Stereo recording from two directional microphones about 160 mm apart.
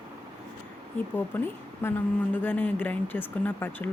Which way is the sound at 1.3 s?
10° left (ahead or behind).